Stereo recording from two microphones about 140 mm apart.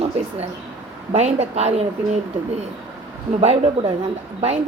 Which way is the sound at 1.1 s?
50° right (ahead or behind).